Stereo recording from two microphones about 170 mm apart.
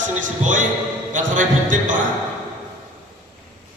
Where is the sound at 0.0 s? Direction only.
50° right (ahead or behind).